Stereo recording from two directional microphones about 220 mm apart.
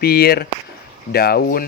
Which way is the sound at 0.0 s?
45° left (ahead or behind).